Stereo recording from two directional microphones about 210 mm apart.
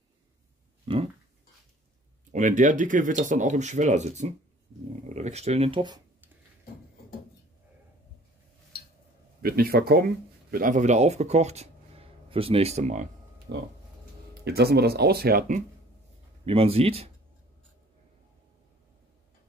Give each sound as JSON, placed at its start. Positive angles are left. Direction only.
{"t": 2.3, "sound": "speech", "side_deg": -35}
{"t": 9.4, "sound": "speech", "side_deg": -45}
{"t": 13.5, "sound": "speech", "side_deg": -50}
{"t": 16.4, "sound": "speech", "side_deg": -25}